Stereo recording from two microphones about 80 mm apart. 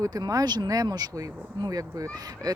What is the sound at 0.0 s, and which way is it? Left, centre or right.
Speech, right.